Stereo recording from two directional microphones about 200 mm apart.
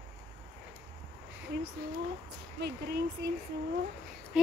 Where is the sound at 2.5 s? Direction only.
55° right (ahead or behind).